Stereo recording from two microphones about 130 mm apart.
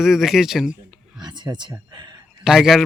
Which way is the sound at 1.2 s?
35° right (ahead or behind).